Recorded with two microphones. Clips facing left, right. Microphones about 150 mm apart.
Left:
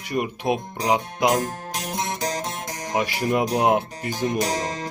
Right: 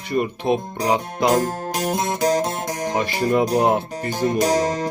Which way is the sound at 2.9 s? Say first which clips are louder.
Right 2 dB; 10° left (ahead or behind).